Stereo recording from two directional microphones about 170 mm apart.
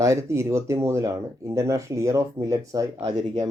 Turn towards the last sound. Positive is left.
turn(degrees=-20)  # may be behind; listen again after turning